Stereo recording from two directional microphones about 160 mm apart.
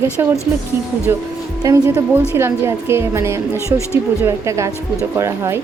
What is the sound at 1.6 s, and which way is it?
A woman's voice, 15° right (ahead or behind).